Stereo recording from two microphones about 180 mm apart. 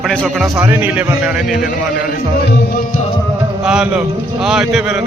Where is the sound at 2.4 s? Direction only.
55° left (ahead or behind).